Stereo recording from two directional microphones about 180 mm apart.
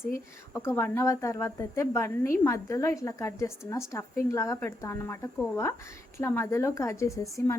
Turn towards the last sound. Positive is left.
turn(degrees=15)  # may be behind; listen again after turning